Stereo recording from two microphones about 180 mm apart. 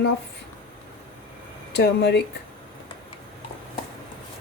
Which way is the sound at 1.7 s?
70° left (ahead or behind).